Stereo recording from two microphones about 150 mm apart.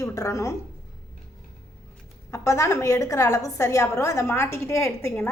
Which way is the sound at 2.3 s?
20° left (ahead or behind).